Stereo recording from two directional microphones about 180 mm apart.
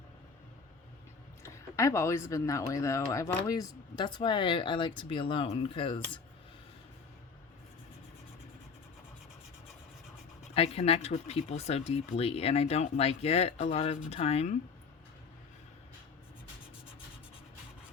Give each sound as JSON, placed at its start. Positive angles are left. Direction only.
{"t": 1.4, "sound": "speech", "side_deg": 15}
{"t": 10.5, "sound": "speech", "side_deg": 35}